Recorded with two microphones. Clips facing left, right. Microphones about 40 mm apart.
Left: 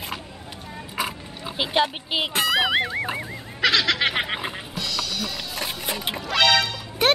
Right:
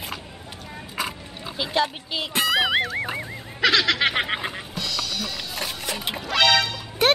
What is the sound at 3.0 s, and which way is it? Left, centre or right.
Fowl, centre.